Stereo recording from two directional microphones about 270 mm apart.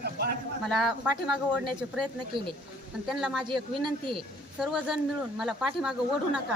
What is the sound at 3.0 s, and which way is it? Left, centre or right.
Speech, centre.